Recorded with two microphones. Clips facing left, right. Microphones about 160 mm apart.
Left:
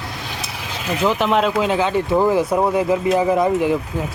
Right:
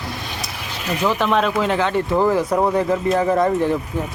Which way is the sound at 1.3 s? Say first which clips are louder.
Left 1 dB; 25° left (ahead or behind).